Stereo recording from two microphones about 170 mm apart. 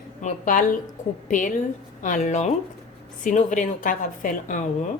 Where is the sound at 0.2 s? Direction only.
50° left (ahead or behind).